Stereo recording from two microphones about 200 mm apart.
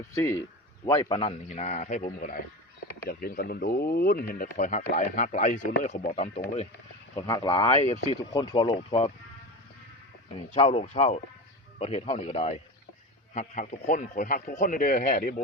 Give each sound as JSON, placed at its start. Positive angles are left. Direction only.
{"t": 0.1, "sound": "speech", "side_deg": 15}
{"t": 0.9, "sound": "a man's voice", "side_deg": 25}
{"t": 7.2, "sound": "speech", "side_deg": 20}
{"t": 7.8, "sound": "a man's voice", "side_deg": 30}
{"t": 8.3, "sound": "speech", "side_deg": 20}
{"t": 10.3, "sound": "a man's voice", "side_deg": 30}